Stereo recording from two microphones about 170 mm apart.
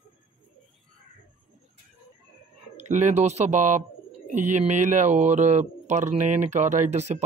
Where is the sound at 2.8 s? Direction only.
45° right (ahead or behind).